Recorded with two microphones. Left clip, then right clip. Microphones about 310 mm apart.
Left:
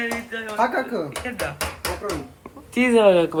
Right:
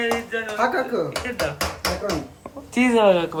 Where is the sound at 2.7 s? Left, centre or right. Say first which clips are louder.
Left 1 dB; centre.